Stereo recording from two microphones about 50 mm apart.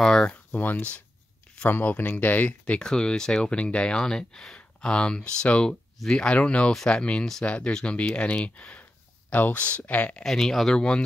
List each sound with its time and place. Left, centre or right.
0.0 s speech: centre
0.5 s speech: left
2.8 s speech: centre
10.2 s speech: centre
10.8 s speech: centre